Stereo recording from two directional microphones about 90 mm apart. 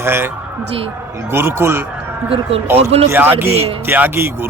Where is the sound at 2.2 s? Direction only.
90° right.